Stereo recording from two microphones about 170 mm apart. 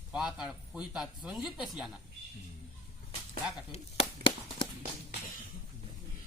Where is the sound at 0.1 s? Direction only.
5° right (ahead or behind).